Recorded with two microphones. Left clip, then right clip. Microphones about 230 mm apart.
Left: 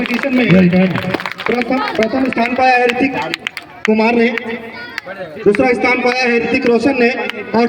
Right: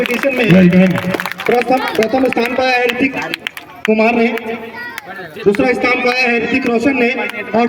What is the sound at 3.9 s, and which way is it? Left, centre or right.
Speech, right.